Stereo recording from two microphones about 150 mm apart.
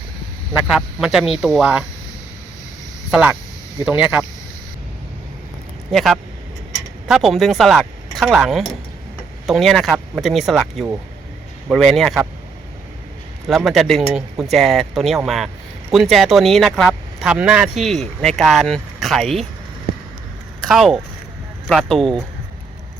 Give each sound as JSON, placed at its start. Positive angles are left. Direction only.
{"t": 0.8, "sound": "speech", "side_deg": 0}
{"t": 3.1, "sound": "speech", "side_deg": -10}
{"t": 5.9, "sound": "speech", "side_deg": 0}
{"t": 13.5, "sound": "speech", "side_deg": 0}
{"t": 20.6, "sound": "speech", "side_deg": 0}